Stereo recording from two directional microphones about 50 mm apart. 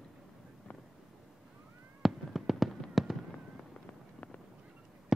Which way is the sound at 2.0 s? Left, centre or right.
Centre.